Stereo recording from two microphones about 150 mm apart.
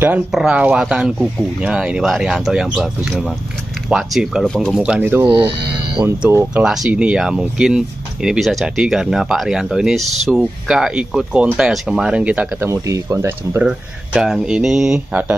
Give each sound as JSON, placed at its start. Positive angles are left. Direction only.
{"t": 0.3, "sound": "speech", "side_deg": -5}
{"t": 6.5, "sound": "speech", "side_deg": -5}
{"t": 13.7, "sound": "speech", "side_deg": -5}